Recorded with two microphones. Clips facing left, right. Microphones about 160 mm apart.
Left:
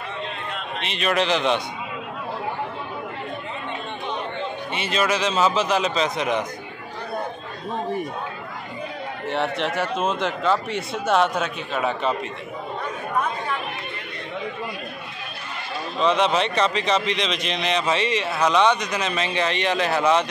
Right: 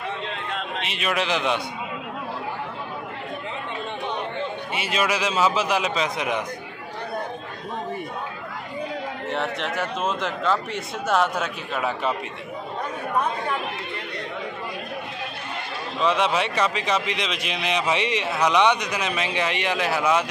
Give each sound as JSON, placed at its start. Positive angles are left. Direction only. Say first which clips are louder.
{"t": 0.8, "sound": "a man's voice", "louder": "left 4 dB", "side_deg": -5}
{"t": 4.7, "sound": "a man's voice", "louder": "left 2 dB", "side_deg": -10}
{"t": 9.3, "sound": "a man's voice", "louder": "left 4 dB", "side_deg": 0}
{"t": 16.0, "sound": "a man's voice", "louder": "left 2 dB", "side_deg": -10}